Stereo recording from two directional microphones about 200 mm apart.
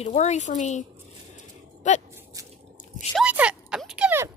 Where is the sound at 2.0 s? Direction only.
15° right (ahead or behind).